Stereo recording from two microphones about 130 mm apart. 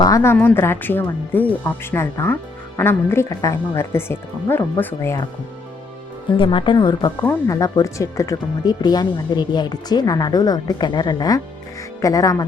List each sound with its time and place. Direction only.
0.0 s speech: 25° left (ahead or behind)
6.3 s a woman's voice: 40° left (ahead or behind)
7.2 s speech: 20° left (ahead or behind)